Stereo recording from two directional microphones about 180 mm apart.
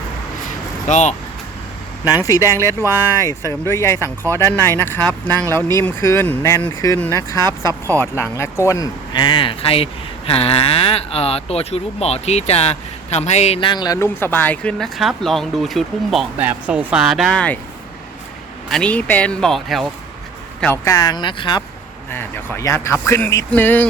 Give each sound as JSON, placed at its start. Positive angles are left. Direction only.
{"t": 0.9, "sound": "speech", "side_deg": 40}
{"t": 2.0, "sound": "speech", "side_deg": 20}
{"t": 18.7, "sound": "speech", "side_deg": 5}
{"t": 20.9, "sound": "speech", "side_deg": 20}
{"t": 22.1, "sound": "speech", "side_deg": 10}